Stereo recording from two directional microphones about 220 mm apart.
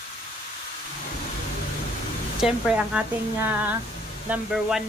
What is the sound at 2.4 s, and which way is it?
Speech, 5° right (ahead or behind).